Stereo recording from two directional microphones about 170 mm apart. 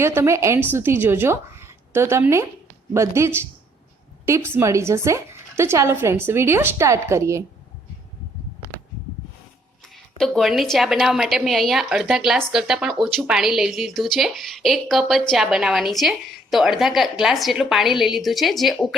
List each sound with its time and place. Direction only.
0.0 s speech: 15° right (ahead or behind)
10.2 s a woman's voice: centre (ahead or behind)